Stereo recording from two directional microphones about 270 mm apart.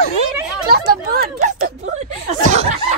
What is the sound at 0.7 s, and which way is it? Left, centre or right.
Chatter, right.